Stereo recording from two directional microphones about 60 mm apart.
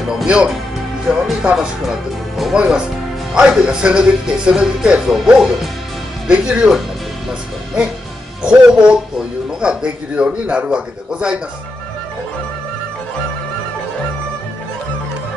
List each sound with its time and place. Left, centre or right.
0.1 s speech: centre
8.4 s speech: centre